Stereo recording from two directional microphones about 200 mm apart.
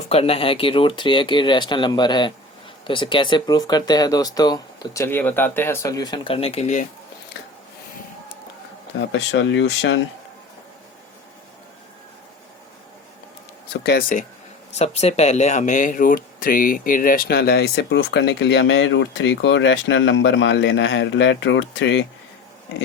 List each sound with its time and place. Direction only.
0.1 s speech: 30° left (ahead or behind)
9.0 s speech: 65° left (ahead or behind)
13.8 s speech: 50° left (ahead or behind)
14.7 s speech: 35° left (ahead or behind); by 22.0 s 65° left (ahead or behind)